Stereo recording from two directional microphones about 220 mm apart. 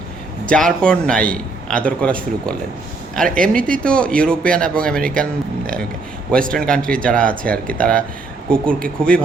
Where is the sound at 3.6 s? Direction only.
40° right (ahead or behind).